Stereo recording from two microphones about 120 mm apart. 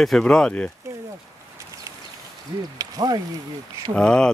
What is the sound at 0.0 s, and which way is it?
Speech, 5° left (ahead or behind).